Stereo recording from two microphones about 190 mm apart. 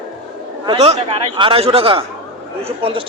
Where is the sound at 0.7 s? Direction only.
30° right (ahead or behind).